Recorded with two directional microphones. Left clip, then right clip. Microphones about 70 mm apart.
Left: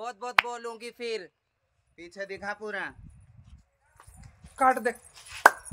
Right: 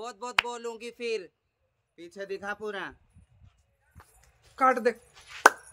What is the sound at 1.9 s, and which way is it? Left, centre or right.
Speech, left.